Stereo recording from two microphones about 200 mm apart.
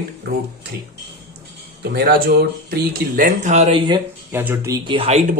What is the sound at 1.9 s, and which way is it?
Speech, 50° right (ahead or behind).